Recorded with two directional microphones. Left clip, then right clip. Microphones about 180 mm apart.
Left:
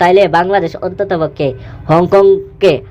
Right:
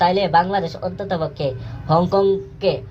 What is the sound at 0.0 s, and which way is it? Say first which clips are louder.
Speech: left 7 dB; 40° left (ahead or behind).